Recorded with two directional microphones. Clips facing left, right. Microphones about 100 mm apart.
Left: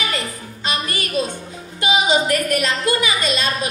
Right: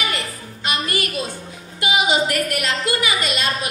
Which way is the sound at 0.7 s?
25° left (ahead or behind).